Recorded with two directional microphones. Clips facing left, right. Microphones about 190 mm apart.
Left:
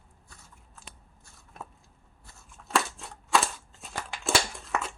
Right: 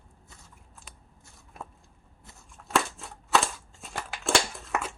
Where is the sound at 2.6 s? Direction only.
Centre (ahead or behind).